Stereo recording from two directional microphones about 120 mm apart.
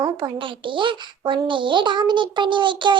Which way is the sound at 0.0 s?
45° right (ahead or behind).